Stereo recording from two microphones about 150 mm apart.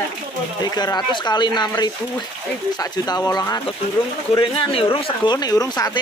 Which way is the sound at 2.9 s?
25° left (ahead or behind).